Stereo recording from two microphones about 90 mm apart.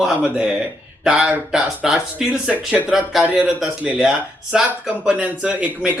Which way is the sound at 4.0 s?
5° right (ahead or behind).